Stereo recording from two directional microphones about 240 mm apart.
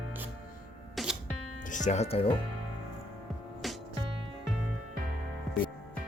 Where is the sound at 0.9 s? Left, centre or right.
Centre.